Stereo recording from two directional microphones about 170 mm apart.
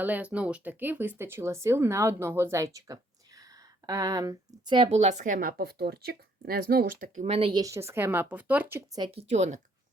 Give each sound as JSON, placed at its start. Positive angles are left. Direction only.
{"t": 0.0, "sound": "speech", "side_deg": -10}
{"t": 4.9, "sound": "speech", "side_deg": -40}
{"t": 7.6, "sound": "speech", "side_deg": -15}
{"t": 9.1, "sound": "speech", "side_deg": -40}